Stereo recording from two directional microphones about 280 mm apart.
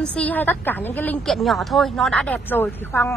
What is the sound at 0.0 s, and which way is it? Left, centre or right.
A woman's voice, centre.